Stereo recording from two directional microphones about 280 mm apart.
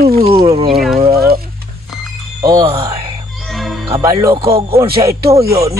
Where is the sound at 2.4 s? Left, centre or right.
Centre.